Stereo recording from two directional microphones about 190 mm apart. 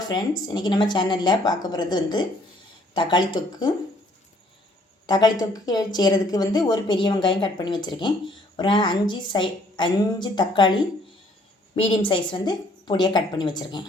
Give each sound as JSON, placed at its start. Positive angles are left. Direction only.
{"t": 0.0, "sound": "a woman's voice", "side_deg": 20}
{"t": 5.0, "sound": "a woman's voice", "side_deg": 20}